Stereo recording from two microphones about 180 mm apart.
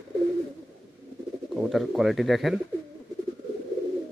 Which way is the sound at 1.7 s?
Centre (ahead or behind).